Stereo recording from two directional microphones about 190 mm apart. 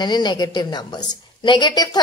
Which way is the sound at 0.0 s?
20° left (ahead or behind).